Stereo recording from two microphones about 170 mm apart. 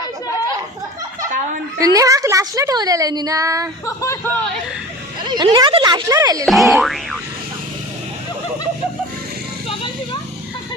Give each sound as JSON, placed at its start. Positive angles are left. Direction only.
{"t": 1.8, "sound": "a woman's voice", "side_deg": -20}
{"t": 3.8, "sound": "speech", "side_deg": 15}
{"t": 5.2, "sound": "a woman's voice", "side_deg": -25}
{"t": 6.4, "sound": "boing", "side_deg": 0}